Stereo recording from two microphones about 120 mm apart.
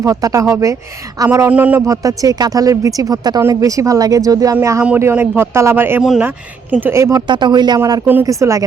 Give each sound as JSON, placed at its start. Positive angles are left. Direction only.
{"t": 0.0, "sound": "speech", "side_deg": -30}
{"t": 1.5, "sound": "speech", "side_deg": -15}
{"t": 1.9, "sound": "speech", "side_deg": -30}
{"t": 4.8, "sound": "speech", "side_deg": -20}
{"t": 6.0, "sound": "speech", "side_deg": -5}
{"t": 6.2, "sound": "speech", "side_deg": -15}
{"t": 7.3, "sound": "speech", "side_deg": -40}